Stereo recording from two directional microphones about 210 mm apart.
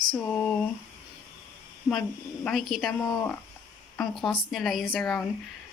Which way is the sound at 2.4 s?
Centre (ahead or behind).